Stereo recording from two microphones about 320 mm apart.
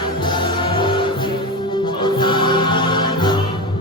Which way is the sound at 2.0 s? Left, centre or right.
Centre.